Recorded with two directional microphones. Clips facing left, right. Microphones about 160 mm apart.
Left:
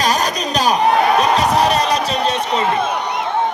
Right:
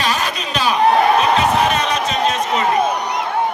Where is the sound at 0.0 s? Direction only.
40° left (ahead or behind).